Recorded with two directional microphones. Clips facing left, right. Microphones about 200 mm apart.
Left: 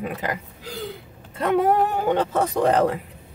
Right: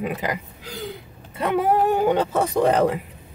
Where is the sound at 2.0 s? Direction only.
10° right (ahead or behind).